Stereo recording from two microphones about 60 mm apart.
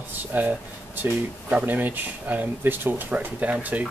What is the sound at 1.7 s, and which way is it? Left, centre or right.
Speech, right.